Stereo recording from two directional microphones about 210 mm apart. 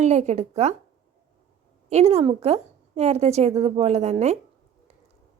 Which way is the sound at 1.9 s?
30° right (ahead or behind).